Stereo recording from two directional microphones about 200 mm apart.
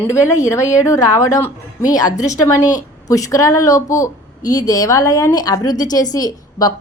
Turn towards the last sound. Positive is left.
turn(degrees=20)  # may be behind; listen again after turning